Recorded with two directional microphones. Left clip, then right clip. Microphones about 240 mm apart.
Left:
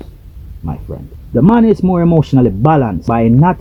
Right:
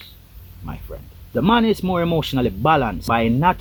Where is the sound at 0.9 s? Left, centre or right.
Centre.